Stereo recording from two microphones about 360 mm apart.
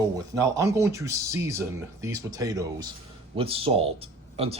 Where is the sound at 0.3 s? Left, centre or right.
Centre.